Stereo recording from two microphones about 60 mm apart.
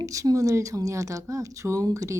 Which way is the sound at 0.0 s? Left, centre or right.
Right.